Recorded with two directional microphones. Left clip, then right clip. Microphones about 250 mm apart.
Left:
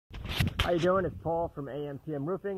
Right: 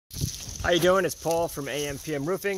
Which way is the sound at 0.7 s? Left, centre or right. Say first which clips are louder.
Right 7 dB; right.